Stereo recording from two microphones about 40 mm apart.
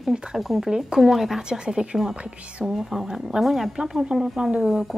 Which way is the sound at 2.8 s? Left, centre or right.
Centre.